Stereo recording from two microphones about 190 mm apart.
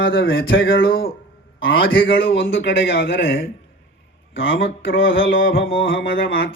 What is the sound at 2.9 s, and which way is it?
Speech, 50° left (ahead or behind).